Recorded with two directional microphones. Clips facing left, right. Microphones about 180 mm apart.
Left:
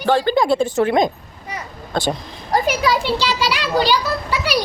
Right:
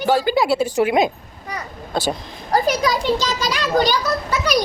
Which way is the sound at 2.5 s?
35° right (ahead or behind).